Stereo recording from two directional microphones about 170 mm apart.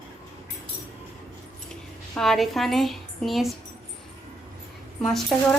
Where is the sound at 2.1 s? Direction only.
Centre (ahead or behind).